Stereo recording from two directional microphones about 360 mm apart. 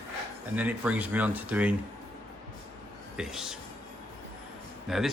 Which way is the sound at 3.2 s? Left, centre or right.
Centre.